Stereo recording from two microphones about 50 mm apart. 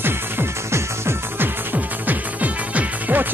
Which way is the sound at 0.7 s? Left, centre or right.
Right.